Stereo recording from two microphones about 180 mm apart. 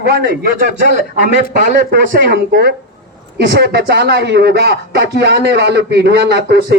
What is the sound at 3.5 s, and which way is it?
Speech, 70° right (ahead or behind).